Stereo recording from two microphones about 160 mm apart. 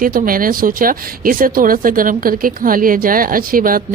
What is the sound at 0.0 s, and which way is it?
Speech, 60° right (ahead or behind).